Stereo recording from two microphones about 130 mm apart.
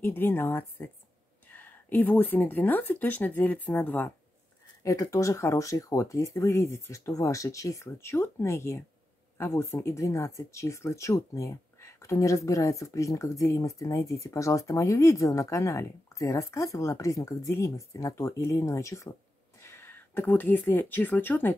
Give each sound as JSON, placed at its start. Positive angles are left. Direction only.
{"t": 0.0, "sound": "speech", "side_deg": 15}
{"t": 4.8, "sound": "speech", "side_deg": 25}